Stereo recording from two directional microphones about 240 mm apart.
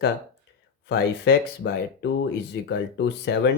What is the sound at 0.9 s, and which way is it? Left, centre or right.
Speech, left.